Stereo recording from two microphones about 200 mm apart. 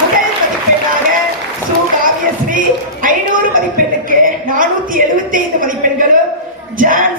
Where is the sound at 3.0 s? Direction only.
45° right (ahead or behind).